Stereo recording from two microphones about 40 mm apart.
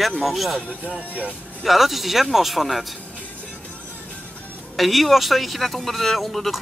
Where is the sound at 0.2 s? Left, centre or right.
Centre.